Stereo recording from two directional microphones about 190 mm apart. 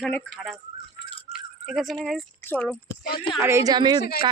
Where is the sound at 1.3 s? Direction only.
5° right (ahead or behind).